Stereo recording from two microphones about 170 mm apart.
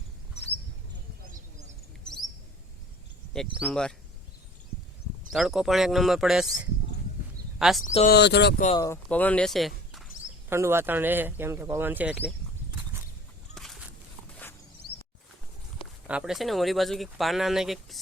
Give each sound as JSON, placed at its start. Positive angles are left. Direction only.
{"t": 1.3, "sound": "a sound", "side_deg": -45}
{"t": 3.3, "sound": "speech", "side_deg": 5}
{"t": 5.3, "sound": "speech", "side_deg": 0}
{"t": 7.6, "sound": "speech", "side_deg": 0}
{"t": 7.9, "sound": "speech", "side_deg": 45}
{"t": 8.1, "sound": "speech", "side_deg": 85}
{"t": 8.7, "sound": "speech", "side_deg": 20}
{"t": 9.0, "sound": "speech", "side_deg": 10}
{"t": 10.5, "sound": "speech", "side_deg": -15}
{"t": 13.5, "sound": "a sound", "side_deg": 0}
{"t": 15.8, "sound": "speech", "side_deg": -5}